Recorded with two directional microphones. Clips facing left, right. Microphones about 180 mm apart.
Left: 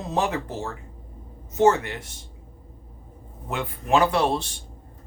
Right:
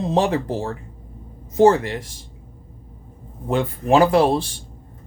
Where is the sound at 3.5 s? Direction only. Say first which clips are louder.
Right 6 dB; 35° right (ahead or behind).